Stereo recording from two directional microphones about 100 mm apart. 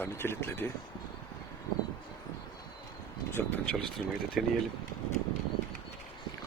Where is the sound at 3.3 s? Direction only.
20° left (ahead or behind).